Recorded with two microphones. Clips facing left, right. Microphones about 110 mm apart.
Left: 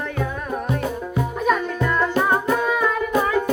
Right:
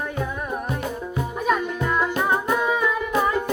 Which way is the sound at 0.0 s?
15° right (ahead or behind).